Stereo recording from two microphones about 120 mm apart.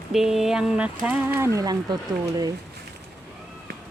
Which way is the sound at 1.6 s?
35° right (ahead or behind).